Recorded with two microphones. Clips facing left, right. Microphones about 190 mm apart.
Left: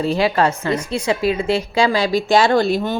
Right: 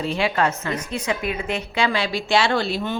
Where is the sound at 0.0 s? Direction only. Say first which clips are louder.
Left 5 dB; 35° left (ahead or behind).